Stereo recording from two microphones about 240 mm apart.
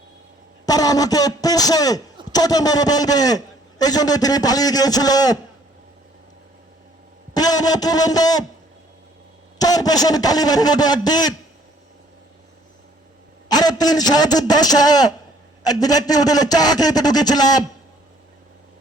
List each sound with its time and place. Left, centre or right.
0.6 s a man's voice: centre
7.3 s a sound: centre
9.6 s a man's voice: centre
13.5 s a man's voice: centre